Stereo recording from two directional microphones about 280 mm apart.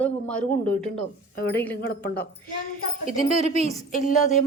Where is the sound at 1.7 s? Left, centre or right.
Left.